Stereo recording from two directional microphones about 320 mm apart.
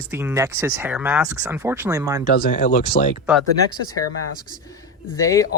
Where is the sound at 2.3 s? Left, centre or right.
Left.